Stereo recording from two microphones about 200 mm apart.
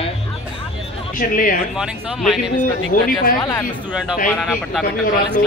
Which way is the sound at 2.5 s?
45° left (ahead or behind).